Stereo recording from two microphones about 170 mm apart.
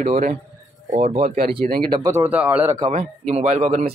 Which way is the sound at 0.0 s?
40° right (ahead or behind).